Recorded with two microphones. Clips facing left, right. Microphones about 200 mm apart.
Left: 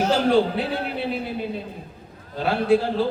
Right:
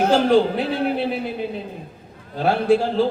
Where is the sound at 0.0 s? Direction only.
50° right (ahead or behind).